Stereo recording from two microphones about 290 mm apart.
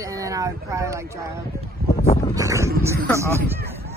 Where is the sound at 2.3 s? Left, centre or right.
Centre.